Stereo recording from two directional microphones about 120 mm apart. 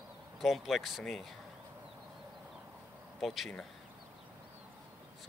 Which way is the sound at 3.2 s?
Centre (ahead or behind).